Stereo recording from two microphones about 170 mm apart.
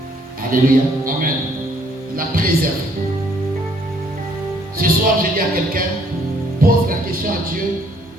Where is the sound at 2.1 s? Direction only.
55° right (ahead or behind).